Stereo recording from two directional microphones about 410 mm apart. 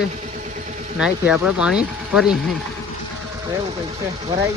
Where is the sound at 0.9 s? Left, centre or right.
Centre.